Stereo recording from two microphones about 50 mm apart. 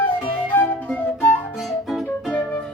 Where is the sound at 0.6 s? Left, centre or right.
Left.